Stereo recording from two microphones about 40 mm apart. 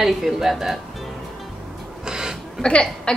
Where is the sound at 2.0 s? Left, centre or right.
Centre.